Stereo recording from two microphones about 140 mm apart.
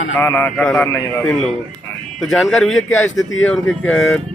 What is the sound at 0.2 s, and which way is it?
Speech, 15° left (ahead or behind).